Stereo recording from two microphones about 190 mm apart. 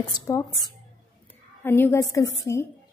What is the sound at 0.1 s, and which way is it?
A woman's voice, 15° left (ahead or behind).